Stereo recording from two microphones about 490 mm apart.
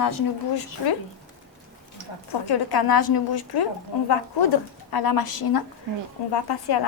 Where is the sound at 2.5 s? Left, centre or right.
Left.